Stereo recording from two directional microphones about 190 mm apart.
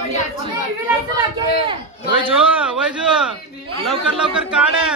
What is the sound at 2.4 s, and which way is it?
A man's voice, 5° right (ahead or behind).